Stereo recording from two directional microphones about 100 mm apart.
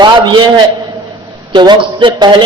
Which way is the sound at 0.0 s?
50° right (ahead or behind).